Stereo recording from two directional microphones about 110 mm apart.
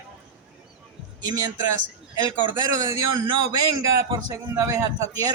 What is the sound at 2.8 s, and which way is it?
Speech, 35° right (ahead or behind).